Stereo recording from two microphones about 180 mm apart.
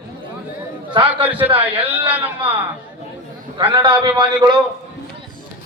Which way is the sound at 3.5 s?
25° right (ahead or behind).